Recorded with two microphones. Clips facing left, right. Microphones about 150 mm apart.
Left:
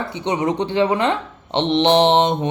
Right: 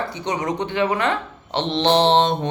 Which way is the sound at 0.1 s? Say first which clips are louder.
Left 4 dB; 25° left (ahead or behind).